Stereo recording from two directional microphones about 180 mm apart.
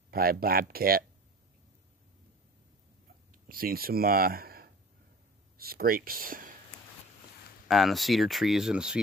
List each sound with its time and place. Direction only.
0.1 s speech: 55° right (ahead or behind)
3.4 s speech: 55° right (ahead or behind)
7.6 s speech: centre (ahead or behind)